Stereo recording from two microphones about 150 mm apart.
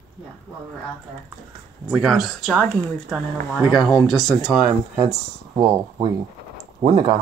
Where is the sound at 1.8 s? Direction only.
5° right (ahead or behind).